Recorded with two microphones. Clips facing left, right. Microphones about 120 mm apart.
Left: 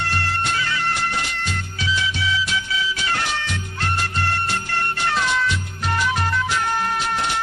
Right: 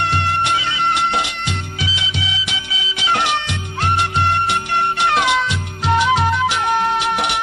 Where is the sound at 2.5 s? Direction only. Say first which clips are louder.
Left 3 dB; 85° right.